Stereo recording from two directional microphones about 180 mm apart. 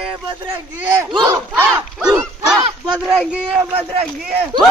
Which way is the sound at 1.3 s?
10° right (ahead or behind).